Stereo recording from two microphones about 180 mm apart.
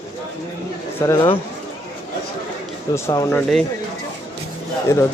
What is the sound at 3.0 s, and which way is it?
Speech, 15° left (ahead or behind).